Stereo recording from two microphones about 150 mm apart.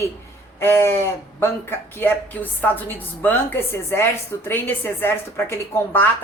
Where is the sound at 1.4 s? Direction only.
15° left (ahead or behind).